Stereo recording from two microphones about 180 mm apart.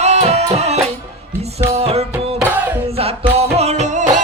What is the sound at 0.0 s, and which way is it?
Music, 35° right (ahead or behind).